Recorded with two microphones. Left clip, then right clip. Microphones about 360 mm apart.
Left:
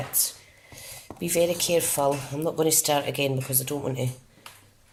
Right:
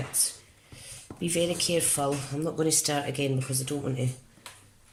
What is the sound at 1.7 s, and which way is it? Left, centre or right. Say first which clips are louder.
Speech: left 4 dB; centre.